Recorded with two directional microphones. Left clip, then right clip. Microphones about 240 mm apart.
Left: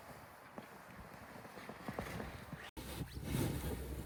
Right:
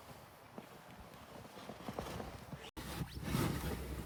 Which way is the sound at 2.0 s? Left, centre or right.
Right.